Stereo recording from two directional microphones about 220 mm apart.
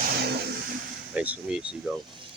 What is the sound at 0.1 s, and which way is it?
Vehicle, 45° right (ahead or behind).